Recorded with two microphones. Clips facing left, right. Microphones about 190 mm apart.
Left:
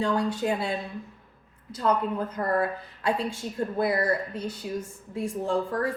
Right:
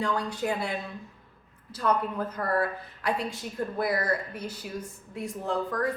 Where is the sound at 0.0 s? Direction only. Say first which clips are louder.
Left 3 dB; 25° left (ahead or behind).